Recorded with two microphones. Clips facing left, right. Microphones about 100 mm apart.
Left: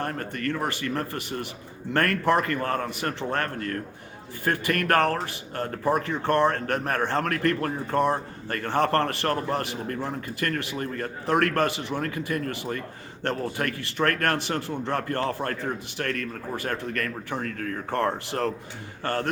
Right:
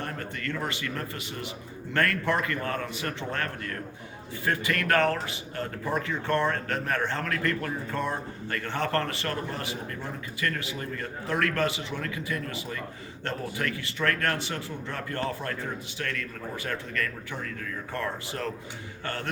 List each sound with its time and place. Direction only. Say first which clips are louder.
0.0 s a man's voice: left 5 dB; 45° left (ahead or behind)
19.0 s a man's voice: left 7 dB; 40° left (ahead or behind)